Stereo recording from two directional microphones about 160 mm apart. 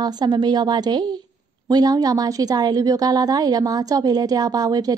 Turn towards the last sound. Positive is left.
turn(degrees=-25)  # may be behind; listen again after turning